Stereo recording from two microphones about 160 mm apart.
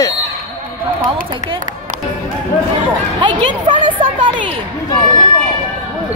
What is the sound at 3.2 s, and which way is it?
A woman's voice, 30° right (ahead or behind).